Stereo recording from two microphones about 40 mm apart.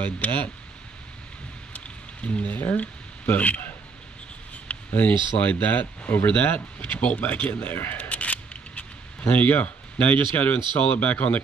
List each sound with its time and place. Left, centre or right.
0.0 s speech: left
2.2 s speech: left
2.5 s speech: left
4.9 s speech: left
6.8 s speech: left
7.7 s speech: left
8.0 s camera: left
9.5 s speech: left